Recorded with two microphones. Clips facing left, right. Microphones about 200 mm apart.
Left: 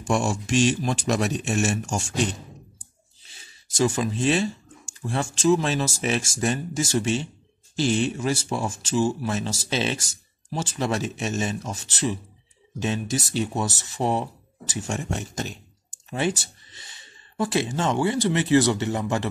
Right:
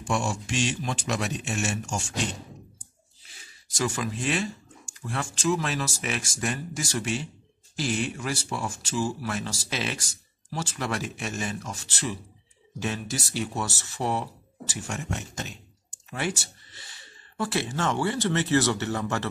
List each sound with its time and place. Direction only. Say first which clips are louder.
0.0 s speech: left 4 dB; 45° left (ahead or behind)
3.3 s zipper: left 1 dB; 25° left (ahead or behind)
5.0 s speech: left 6 dB; 25° left (ahead or behind)